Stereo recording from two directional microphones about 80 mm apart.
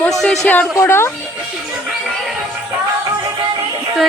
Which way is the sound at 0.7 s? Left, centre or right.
Left.